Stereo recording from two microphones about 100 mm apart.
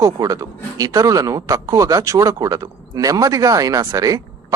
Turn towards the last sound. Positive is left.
turn(degrees=-35)  # may be behind; listen again after turning